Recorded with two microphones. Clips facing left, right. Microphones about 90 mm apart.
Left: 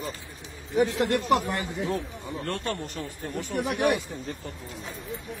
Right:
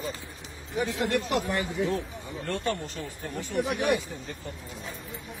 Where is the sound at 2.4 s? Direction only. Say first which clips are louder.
Right 2 dB; 55° left (ahead or behind).